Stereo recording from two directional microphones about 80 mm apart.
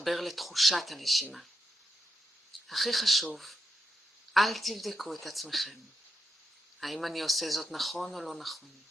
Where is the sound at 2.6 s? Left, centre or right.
Centre.